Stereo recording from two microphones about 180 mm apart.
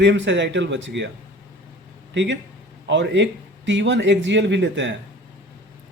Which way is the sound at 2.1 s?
80° right.